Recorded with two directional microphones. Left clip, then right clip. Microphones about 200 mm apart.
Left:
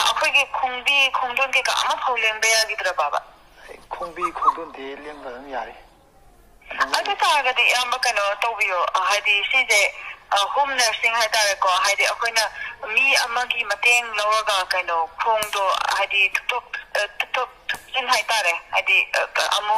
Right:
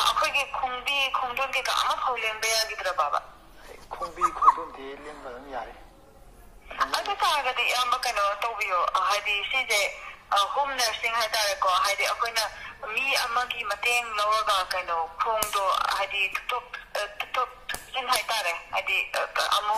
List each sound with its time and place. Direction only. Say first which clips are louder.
0.0 s speech: left 5 dB; 25° left (ahead or behind)
5.2 s speech: left 6 dB; 25° left (ahead or behind)
6.7 s speech: left 5 dB; 25° left (ahead or behind)